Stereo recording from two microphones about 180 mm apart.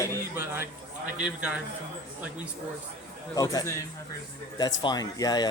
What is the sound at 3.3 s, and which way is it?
Speech, 20° left (ahead or behind).